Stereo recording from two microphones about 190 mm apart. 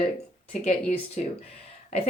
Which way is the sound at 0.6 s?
35° left (ahead or behind).